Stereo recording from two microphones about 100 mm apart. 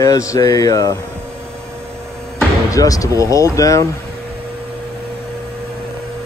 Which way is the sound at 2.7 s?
35° left (ahead or behind).